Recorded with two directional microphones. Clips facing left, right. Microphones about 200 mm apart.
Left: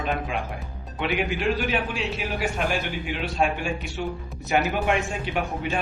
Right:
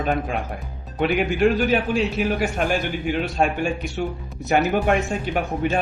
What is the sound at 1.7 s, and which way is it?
Speech, 40° right (ahead or behind).